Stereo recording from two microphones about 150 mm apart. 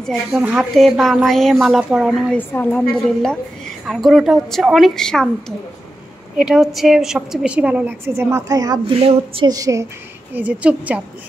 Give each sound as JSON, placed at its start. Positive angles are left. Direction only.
{"t": 0.0, "sound": "a woman's voice", "side_deg": 0}
{"t": 2.3, "sound": "a woman's voice", "side_deg": 10}
{"t": 6.3, "sound": "a woman's voice", "side_deg": -5}
{"t": 9.5, "sound": "a woman's voice", "side_deg": -20}
{"t": 10.3, "sound": "a woman's voice", "side_deg": -10}